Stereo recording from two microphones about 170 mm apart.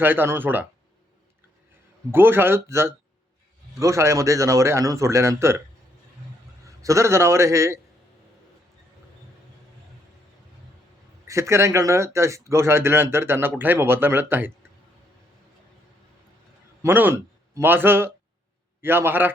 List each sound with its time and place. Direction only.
0.0 s speech: 10° right (ahead or behind)
2.1 s speech: 15° right (ahead or behind)
6.8 s speech: 15° right (ahead or behind)
11.3 s speech: 15° right (ahead or behind)
16.8 s speech: 10° right (ahead or behind)